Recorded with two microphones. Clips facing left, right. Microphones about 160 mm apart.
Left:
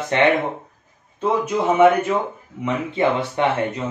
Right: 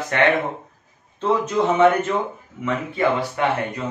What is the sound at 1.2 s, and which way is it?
Speech, 10° left (ahead or behind).